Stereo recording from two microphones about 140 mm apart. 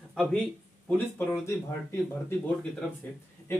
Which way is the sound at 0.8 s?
15° left (ahead or behind).